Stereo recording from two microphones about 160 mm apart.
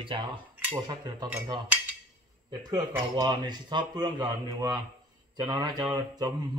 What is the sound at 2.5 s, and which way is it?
Speech, 25° right (ahead or behind).